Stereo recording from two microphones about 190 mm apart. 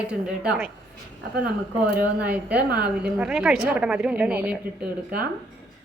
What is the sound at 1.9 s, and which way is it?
Speech, 55° right (ahead or behind).